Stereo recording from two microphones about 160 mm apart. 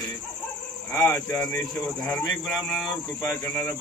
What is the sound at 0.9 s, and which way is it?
A man's voice, 10° left (ahead or behind).